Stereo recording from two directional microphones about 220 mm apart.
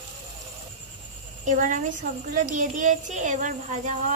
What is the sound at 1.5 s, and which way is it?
Speech, 35° right (ahead or behind).